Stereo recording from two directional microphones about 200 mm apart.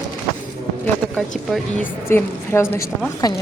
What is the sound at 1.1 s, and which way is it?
Speech, centre (ahead or behind).